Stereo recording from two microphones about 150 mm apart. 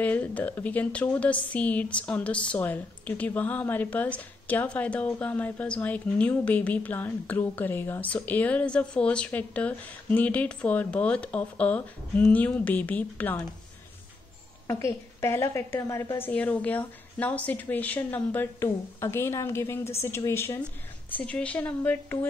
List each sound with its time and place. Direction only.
0.0 s a woman's voice: 10° left (ahead or behind)
14.7 s a woman's voice: 20° left (ahead or behind)